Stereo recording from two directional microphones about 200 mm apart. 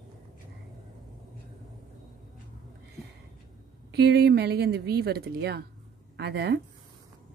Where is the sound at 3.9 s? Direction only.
55° right (ahead or behind).